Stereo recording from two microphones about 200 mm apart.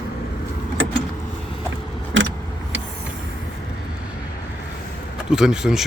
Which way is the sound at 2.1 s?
70° right (ahead or behind).